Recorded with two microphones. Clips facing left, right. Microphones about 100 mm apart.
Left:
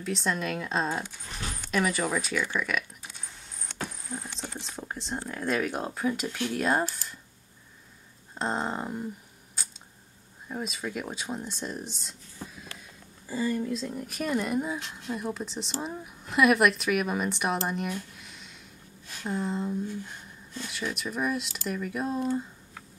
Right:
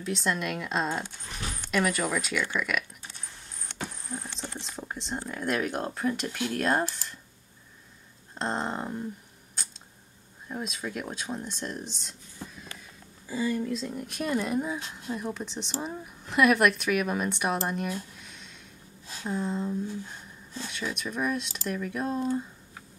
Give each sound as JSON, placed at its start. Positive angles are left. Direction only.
{"t": 0.0, "sound": "a woman's voice", "side_deg": 0}
{"t": 3.8, "sound": "a woman's voice", "side_deg": 5}
{"t": 8.4, "sound": "a woman's voice", "side_deg": 5}
{"t": 10.5, "sound": "a woman's voice", "side_deg": 0}
{"t": 13.3, "sound": "a woman's voice", "side_deg": 0}
{"t": 18.2, "sound": "a sound", "side_deg": 5}
{"t": 19.2, "sound": "a woman's voice", "side_deg": 0}